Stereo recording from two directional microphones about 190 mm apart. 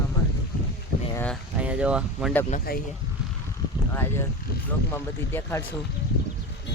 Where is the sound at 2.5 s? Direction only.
50° left (ahead or behind).